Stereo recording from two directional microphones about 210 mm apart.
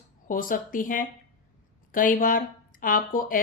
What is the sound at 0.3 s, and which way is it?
Speech, 40° left (ahead or behind).